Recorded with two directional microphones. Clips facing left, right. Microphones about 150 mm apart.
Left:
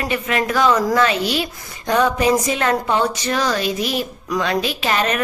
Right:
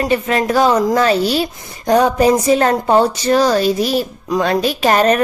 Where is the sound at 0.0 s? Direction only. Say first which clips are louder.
Right 5 dB; 35° right (ahead or behind).